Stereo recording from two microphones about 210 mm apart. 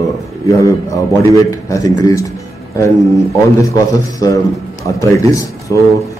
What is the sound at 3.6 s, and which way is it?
A man's voice, 15° left (ahead or behind).